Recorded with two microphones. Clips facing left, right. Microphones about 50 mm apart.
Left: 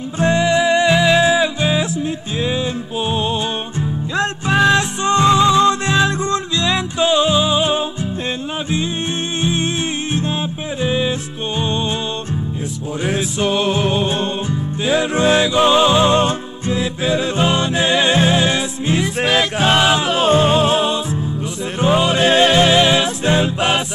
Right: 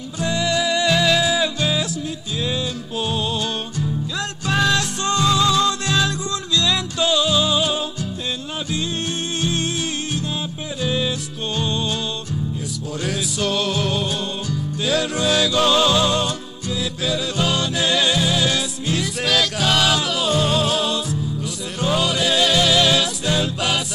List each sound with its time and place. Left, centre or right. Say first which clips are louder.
0.2 s music: left 6 dB; left
9.4 s music: left 4 dB; left
10.8 s music: left 4 dB; left
13.0 s music: left 5 dB; left